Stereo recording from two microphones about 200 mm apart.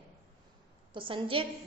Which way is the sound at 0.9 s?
25° right (ahead or behind).